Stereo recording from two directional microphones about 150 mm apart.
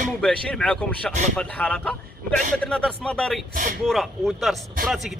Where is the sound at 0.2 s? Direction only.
5° left (ahead or behind).